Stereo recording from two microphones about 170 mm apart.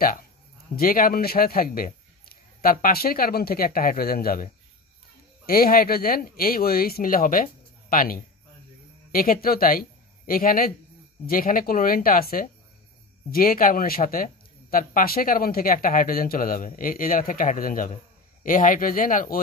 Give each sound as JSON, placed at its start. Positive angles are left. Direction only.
{"t": 0.7, "sound": "speech", "side_deg": 60}
{"t": 5.5, "sound": "speech", "side_deg": 60}